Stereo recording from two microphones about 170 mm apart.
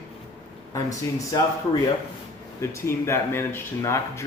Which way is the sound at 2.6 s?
15° left (ahead or behind).